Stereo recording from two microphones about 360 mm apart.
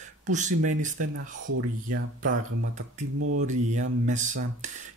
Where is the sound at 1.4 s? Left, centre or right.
Right.